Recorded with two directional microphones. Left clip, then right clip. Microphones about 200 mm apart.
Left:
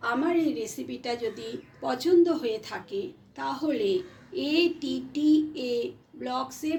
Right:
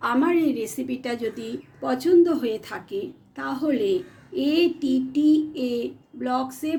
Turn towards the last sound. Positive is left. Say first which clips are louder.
# right 4 dB
turn(degrees=-40)  # may be behind; listen again after turning